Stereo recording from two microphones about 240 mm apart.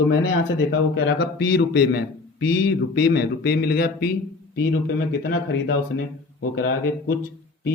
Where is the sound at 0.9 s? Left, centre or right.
Left.